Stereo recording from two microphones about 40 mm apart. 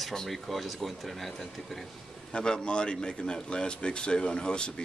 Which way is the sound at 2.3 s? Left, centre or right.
Left.